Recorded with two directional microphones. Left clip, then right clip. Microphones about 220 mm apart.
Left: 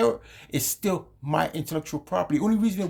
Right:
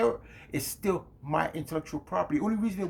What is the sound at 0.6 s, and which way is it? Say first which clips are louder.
Speech: left 2 dB; 45° left (ahead or behind).